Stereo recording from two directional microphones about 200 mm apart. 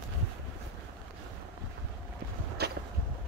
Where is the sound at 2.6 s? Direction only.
55° right (ahead or behind).